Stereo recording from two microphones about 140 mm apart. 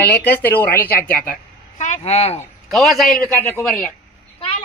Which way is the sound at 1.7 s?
55° left (ahead or behind).